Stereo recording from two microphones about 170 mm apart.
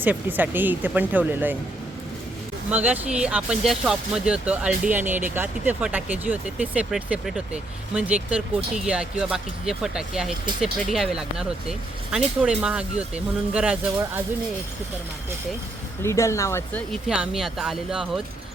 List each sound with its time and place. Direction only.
0.0 s speech: 10° right (ahead or behind)
2.6 s speech: 10° right (ahead or behind)
16.0 s speech: 15° left (ahead or behind)
16.9 s speech: 5° right (ahead or behind)